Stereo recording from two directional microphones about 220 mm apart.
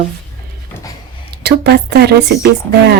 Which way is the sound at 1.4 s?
50° right (ahead or behind).